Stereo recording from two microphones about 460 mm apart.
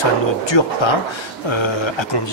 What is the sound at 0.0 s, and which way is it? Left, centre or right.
Speech, left.